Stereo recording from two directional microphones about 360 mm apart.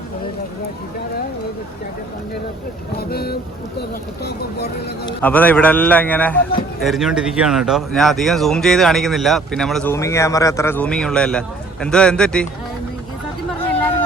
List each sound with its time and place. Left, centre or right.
3.0 s speech: left
5.0 s speech: centre